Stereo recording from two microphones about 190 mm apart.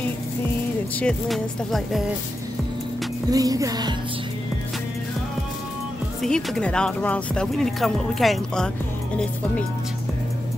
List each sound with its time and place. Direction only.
0.9 s speech: 5° left (ahead or behind)
3.3 s music: 20° right (ahead or behind)
6.2 s speech: 5° left (ahead or behind)